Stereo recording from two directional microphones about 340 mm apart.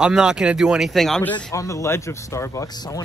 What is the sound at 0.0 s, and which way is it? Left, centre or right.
Speech, centre.